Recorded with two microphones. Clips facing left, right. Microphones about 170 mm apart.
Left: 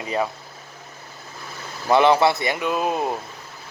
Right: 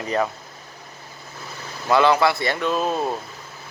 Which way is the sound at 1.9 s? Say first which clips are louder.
Left 1 dB; 20° left (ahead or behind).